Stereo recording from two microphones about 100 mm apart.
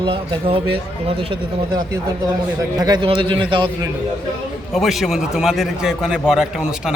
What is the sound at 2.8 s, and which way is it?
Speech, 45° right (ahead or behind).